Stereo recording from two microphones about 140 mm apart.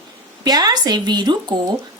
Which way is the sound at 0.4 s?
30° right (ahead or behind).